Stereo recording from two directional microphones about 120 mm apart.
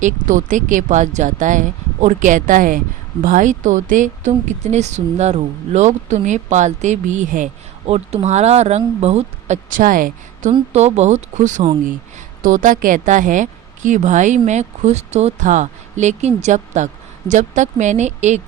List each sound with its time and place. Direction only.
0.0 s a woman's voice: 90° right
10.7 s a woman's voice: 65° right (ahead or behind)